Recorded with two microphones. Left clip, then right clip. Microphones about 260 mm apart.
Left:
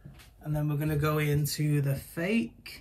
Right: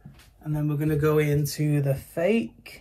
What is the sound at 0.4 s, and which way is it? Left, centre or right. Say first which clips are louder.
Speech: right 4 dB; centre.